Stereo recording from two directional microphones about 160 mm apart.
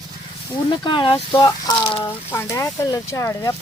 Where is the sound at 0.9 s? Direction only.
30° left (ahead or behind).